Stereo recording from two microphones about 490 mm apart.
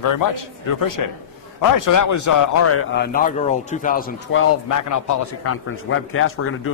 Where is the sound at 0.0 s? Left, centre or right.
Left.